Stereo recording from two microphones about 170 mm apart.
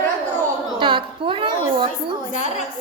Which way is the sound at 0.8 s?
30° right (ahead or behind).